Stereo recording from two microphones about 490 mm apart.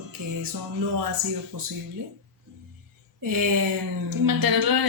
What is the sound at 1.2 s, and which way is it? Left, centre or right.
Speech, right.